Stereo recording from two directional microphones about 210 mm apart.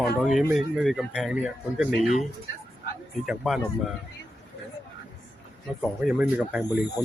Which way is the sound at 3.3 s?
5° right (ahead or behind).